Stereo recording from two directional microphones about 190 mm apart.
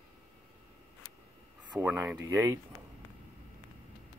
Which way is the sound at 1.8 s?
10° right (ahead or behind).